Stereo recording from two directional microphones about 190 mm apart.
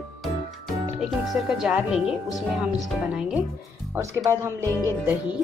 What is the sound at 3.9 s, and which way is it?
Speech, 15° right (ahead or behind).